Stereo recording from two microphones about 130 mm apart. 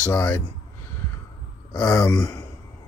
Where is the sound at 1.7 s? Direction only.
30° left (ahead or behind).